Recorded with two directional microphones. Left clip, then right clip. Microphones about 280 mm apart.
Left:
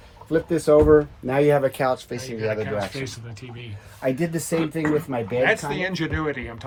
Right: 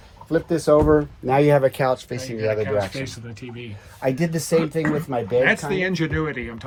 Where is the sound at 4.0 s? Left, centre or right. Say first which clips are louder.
Right 1 dB; right.